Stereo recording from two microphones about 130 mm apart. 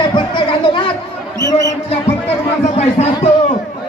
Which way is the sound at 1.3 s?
25° right (ahead or behind).